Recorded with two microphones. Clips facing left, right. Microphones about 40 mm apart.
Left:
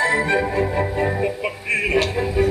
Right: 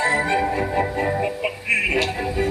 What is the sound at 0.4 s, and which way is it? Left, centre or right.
Music, centre.